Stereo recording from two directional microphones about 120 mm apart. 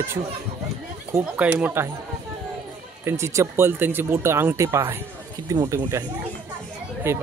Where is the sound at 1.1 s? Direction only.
15° right (ahead or behind).